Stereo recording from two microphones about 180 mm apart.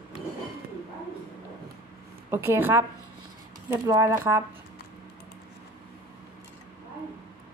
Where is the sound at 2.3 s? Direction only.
15° right (ahead or behind).